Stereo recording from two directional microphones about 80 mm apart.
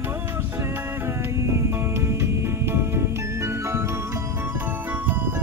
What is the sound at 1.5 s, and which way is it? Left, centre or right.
Music, right.